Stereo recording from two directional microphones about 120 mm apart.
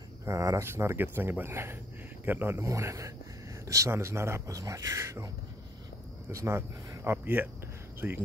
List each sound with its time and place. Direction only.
0.2 s speech: 25° right (ahead or behind)
6.3 s speech: 25° right (ahead or behind)